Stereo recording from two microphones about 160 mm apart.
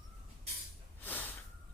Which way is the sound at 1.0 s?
10° left (ahead or behind).